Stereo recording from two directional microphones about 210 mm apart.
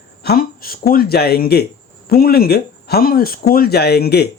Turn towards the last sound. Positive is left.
turn(degrees=50)  # may be behind; listen again after turning